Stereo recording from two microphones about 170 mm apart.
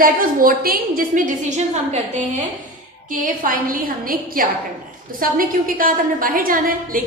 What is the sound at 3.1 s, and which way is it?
A woman's voice, 55° right (ahead or behind).